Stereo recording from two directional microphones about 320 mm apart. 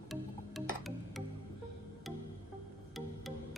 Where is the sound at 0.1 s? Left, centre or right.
Centre.